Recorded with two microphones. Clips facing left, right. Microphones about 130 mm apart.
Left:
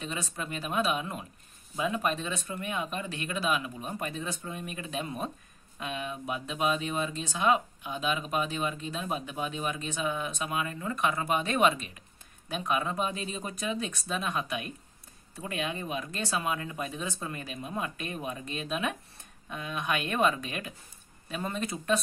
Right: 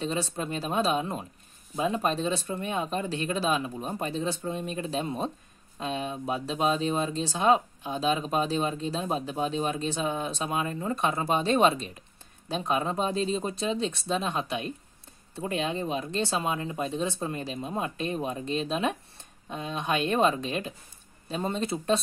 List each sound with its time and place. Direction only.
0.0 s speech: 35° right (ahead or behind)